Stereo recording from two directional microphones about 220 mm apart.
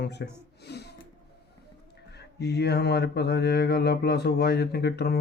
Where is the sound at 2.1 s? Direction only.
50° left (ahead or behind).